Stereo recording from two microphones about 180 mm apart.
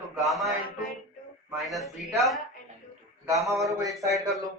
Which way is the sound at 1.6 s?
Centre (ahead or behind).